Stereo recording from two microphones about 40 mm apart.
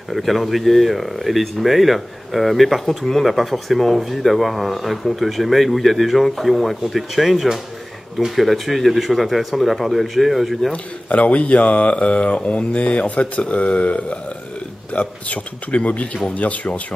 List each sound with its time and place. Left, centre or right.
0.1 s speech: centre
10.7 s speech: left